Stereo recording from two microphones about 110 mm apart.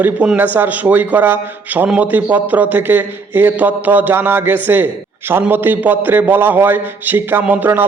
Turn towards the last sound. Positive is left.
turn(degrees=-15)  # may be behind; listen again after turning